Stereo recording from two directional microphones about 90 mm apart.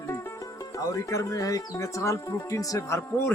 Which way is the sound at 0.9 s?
35° left (ahead or behind).